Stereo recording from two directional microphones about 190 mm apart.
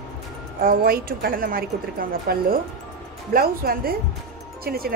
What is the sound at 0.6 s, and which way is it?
Speech, 50° right (ahead or behind).